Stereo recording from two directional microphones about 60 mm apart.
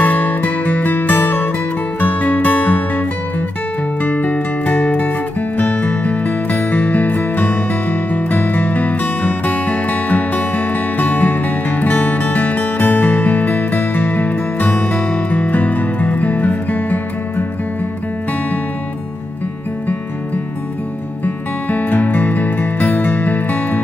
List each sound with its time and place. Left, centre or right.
0.0 s music: left
4.0 s music: left
21.6 s music: left